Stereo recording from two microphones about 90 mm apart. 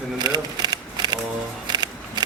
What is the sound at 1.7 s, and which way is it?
Music, 50° right (ahead or behind).